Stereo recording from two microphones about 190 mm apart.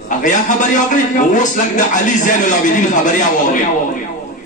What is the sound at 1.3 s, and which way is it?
Speech, 40° left (ahead or behind).